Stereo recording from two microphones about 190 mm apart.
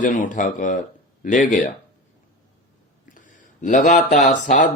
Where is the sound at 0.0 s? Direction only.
45° left (ahead or behind).